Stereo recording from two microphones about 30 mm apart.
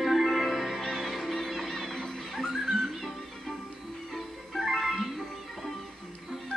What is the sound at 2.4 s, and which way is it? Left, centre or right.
Music, centre.